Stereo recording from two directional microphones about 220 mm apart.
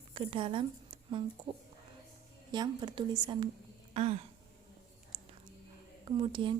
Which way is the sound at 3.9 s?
30° right (ahead or behind).